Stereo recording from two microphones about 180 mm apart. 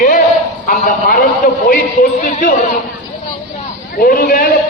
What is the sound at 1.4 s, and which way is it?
Speech, 45° left (ahead or behind).